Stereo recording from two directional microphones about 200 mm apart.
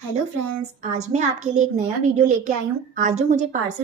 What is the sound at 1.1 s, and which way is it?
A woman's voice, 35° right (ahead or behind).